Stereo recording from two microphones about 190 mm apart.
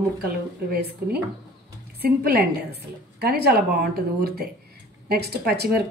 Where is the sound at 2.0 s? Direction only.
55° right (ahead or behind).